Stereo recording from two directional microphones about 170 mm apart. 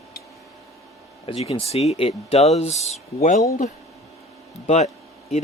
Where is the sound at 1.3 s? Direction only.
30° left (ahead or behind).